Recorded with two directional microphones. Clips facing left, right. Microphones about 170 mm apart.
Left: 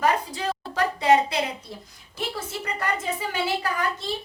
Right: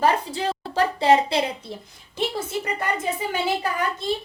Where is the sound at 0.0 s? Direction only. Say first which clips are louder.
Right 2 dB; 30° right (ahead or behind).